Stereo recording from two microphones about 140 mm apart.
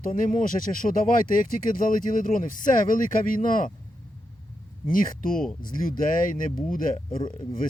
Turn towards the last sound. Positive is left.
turn(degrees=35)  # may be behind; listen again after turning